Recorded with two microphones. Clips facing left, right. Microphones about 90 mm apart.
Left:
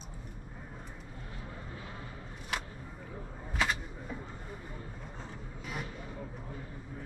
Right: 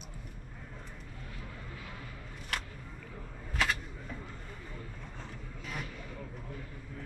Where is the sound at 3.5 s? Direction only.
5° left (ahead or behind).